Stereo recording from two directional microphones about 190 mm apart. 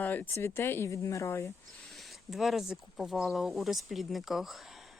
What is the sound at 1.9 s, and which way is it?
Speech, centre (ahead or behind).